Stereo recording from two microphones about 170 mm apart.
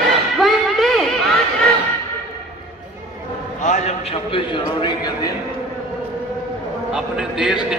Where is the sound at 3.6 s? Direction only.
40° left (ahead or behind); by 5.3 s 25° left (ahead or behind).